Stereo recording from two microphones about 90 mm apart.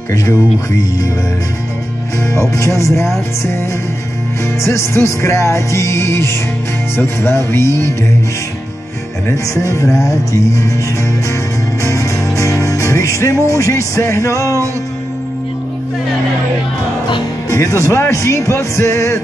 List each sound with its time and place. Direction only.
0.1 s music: 35° left (ahead or behind)
2.5 s music: 35° left (ahead or behind)
4.6 s music: 30° left (ahead or behind)
7.0 s speech: 25° left (ahead or behind)
9.5 s music: 35° left (ahead or behind)
11.8 s music: 35° left (ahead or behind)
17.5 s music: 35° left (ahead or behind)